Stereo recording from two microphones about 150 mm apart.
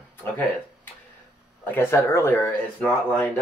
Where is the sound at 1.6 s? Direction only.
15° left (ahead or behind).